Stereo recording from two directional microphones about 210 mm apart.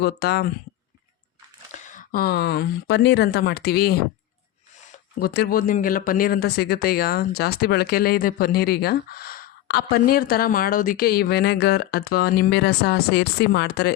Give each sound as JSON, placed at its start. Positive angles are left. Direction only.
{"t": 0.0, "sound": "speech", "side_deg": 50}
{"t": 1.9, "sound": "speech", "side_deg": 40}
{"t": 5.2, "sound": "speech", "side_deg": 50}